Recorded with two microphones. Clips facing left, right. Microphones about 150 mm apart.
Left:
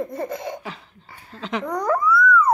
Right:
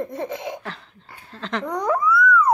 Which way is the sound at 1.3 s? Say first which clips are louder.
Left 1 dB; 5° left (ahead or behind).